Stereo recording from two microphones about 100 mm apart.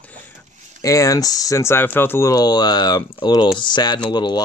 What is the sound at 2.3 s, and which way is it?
Speech, 45° left (ahead or behind).